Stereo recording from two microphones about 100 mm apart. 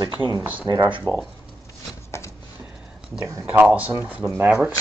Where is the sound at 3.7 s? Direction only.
15° right (ahead or behind).